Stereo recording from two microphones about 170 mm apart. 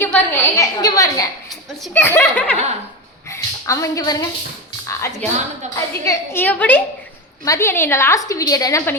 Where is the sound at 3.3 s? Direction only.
15° left (ahead or behind).